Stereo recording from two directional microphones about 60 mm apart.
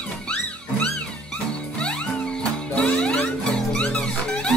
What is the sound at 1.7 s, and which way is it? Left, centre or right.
Music, centre.